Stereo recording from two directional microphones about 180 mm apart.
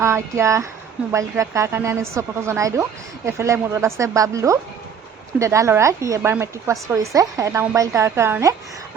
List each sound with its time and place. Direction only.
0.0 s speech: 15° right (ahead or behind)